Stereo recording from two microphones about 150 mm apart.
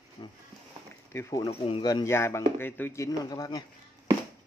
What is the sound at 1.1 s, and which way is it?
Speech, 20° left (ahead or behind).